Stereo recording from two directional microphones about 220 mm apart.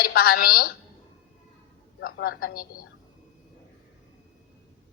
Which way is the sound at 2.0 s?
40° left (ahead or behind).